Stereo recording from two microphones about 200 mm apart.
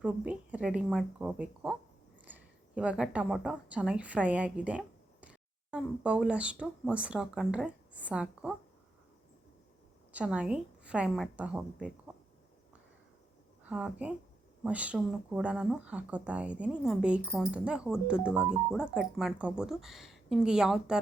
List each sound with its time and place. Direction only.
0.0 s speech: 5° right (ahead or behind)
10.1 s speech: 5° right (ahead or behind)
13.7 s speech: 5° right (ahead or behind)